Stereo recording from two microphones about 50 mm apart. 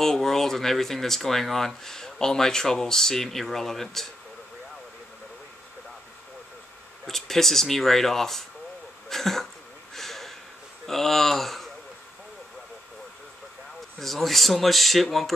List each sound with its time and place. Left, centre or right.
0.0 s speech: centre
7.1 s speech: centre
9.9 s a sound: centre
10.9 s speech: centre
13.9 s speech: centre